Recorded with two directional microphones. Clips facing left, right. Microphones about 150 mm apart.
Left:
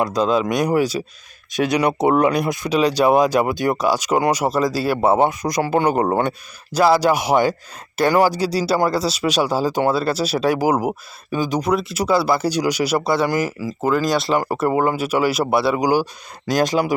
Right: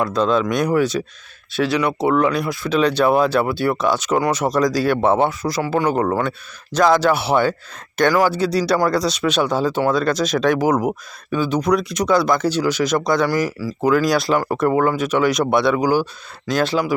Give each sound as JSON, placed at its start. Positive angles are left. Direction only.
{"t": 0.0, "sound": "speech", "side_deg": 10}
{"t": 6.0, "sound": "speech", "side_deg": 25}
{"t": 6.7, "sound": "speech", "side_deg": 10}
{"t": 13.7, "sound": "speech", "side_deg": 0}